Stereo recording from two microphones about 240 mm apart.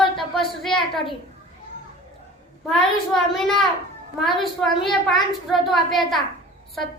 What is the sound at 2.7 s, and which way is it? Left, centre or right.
A child's voice, centre.